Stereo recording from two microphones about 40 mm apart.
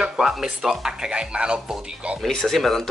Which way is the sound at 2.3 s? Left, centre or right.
Centre.